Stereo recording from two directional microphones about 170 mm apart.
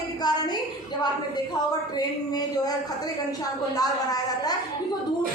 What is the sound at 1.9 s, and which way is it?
Speech, 20° left (ahead or behind).